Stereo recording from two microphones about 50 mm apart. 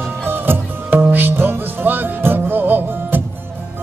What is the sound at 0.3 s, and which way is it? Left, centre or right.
Music, right.